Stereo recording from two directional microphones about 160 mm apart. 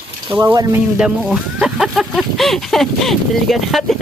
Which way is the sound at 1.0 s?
5° right (ahead or behind).